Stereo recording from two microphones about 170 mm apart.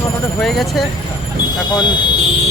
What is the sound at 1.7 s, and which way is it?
Speech, 25° left (ahead or behind).